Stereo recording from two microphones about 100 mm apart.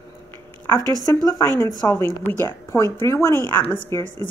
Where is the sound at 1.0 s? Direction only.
40° left (ahead or behind).